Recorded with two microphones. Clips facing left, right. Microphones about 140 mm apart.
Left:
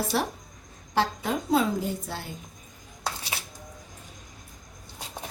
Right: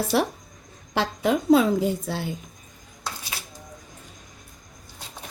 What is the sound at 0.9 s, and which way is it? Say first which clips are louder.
A woman's voice: right 4 dB; 75° right (ahead or behind).